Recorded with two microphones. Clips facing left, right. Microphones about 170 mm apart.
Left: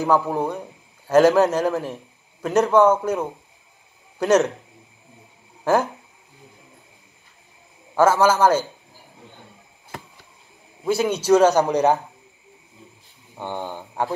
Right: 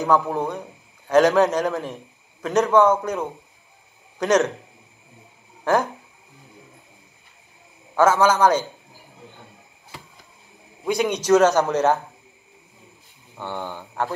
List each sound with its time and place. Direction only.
0.0 s a man's voice: 10° left (ahead or behind)
5.6 s speech: 5° left (ahead or behind)
7.9 s a man's voice: 10° left (ahead or behind)
10.9 s a man's voice: 5° left (ahead or behind)
13.4 s a man's voice: 15° left (ahead or behind)